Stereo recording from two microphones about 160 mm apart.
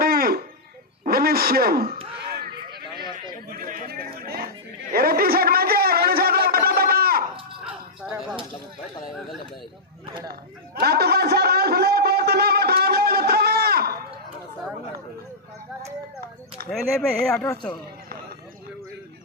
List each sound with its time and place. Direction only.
0.0 s a sound: 70° right (ahead or behind)
1.0 s speech: 70° right (ahead or behind)
3.5 s chatter: 60° right (ahead or behind)
7.6 s whip: 5° right (ahead or behind)
10.8 s a sound: 80° right
16.6 s speech: 5° left (ahead or behind)